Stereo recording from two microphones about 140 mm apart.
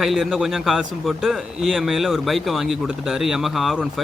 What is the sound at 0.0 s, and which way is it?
Speech, centre (ahead or behind).